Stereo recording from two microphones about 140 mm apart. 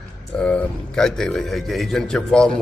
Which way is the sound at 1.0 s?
5° left (ahead or behind).